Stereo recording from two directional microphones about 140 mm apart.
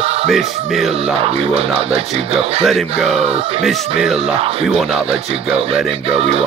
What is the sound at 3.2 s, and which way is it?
Speech, 45° right (ahead or behind).